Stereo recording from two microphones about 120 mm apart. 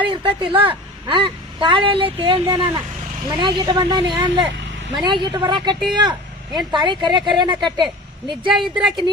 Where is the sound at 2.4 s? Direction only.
30° right (ahead or behind).